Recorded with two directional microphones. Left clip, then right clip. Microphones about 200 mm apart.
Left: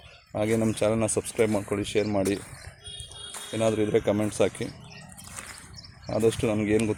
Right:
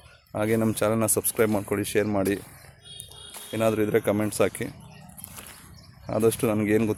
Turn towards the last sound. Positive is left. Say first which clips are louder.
# right 1 dB
turn(degrees=-15)  # may be behind; listen again after turning